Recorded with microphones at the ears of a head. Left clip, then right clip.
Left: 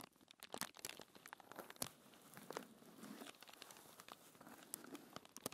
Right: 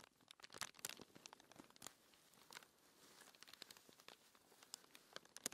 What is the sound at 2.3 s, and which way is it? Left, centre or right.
Crumpling, left.